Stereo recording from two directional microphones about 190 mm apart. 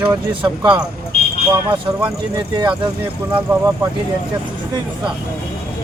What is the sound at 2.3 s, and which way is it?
Speech, 20° right (ahead or behind).